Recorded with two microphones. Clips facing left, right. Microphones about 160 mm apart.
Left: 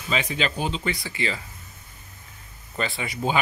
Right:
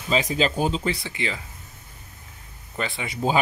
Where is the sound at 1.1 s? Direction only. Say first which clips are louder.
Left 1 dB; 15° right (ahead or behind).